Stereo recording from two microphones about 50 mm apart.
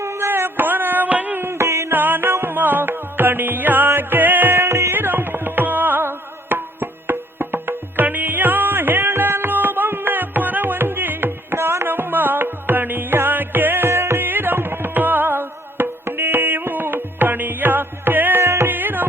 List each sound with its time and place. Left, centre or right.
0.0 s a sound: right
1.5 s music: right
1.9 s music: right
4.9 s music: right
13.9 s music: right
14.2 s music: right
18.4 s music: right
18.7 s music: right